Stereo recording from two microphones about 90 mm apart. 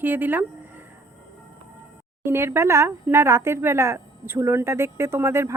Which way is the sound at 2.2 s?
30° right (ahead or behind).